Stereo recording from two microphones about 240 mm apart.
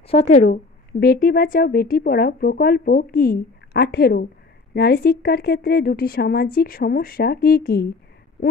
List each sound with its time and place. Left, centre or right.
0.1 s speech: left
0.5 s a woman's voice: left